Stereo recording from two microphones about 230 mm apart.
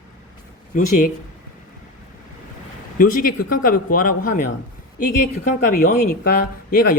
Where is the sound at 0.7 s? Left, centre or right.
Left.